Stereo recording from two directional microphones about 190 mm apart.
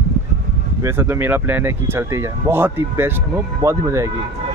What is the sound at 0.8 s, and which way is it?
Speech, 15° right (ahead or behind).